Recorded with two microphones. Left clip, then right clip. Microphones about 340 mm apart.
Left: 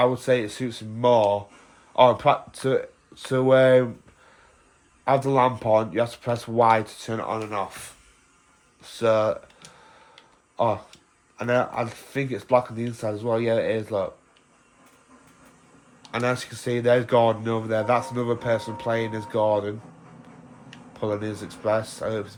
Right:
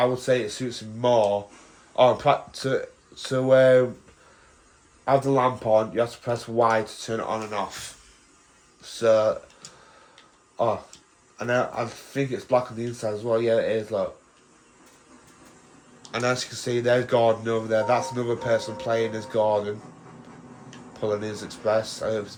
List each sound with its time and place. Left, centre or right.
0.0 s speech: left
5.0 s speech: left
10.6 s speech: left
16.1 s speech: centre
20.9 s speech: centre